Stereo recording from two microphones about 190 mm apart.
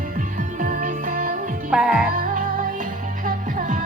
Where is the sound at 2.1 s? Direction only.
45° right (ahead or behind).